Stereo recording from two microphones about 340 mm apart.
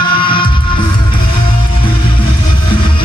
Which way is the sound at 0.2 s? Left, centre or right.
Centre.